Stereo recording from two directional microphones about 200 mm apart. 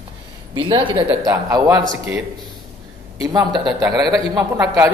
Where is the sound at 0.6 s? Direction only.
25° right (ahead or behind).